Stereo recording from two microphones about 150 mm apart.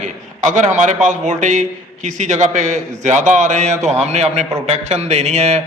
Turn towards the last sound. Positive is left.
turn(degrees=-50)  # may be behind; listen again after turning